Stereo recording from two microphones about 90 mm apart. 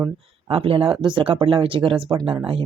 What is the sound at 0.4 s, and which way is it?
Speech, 90° right.